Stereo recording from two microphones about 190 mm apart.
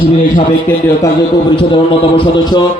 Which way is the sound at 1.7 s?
25° left (ahead or behind).